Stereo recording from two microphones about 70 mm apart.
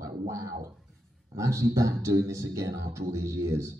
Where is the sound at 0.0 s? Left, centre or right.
Right.